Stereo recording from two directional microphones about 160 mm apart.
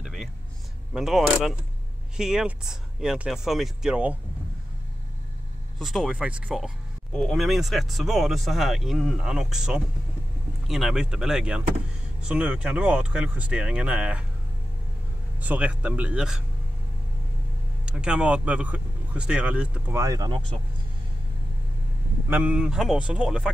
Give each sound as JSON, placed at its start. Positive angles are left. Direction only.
{"t": 0.0, "sound": "a sound", "side_deg": 0}
{"t": 0.9, "sound": "speech", "side_deg": -5}
{"t": 5.8, "sound": "speech", "side_deg": 0}
{"t": 15.4, "sound": "speech", "side_deg": -10}
{"t": 17.8, "sound": "speech", "side_deg": -5}
{"t": 20.0, "sound": "speech", "side_deg": -20}
{"t": 22.3, "sound": "speech", "side_deg": -10}